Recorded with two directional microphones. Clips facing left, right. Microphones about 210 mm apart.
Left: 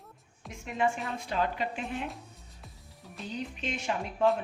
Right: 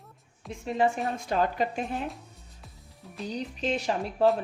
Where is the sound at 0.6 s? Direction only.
35° right (ahead or behind).